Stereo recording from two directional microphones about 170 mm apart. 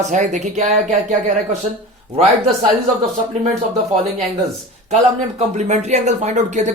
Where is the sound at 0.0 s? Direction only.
45° right (ahead or behind).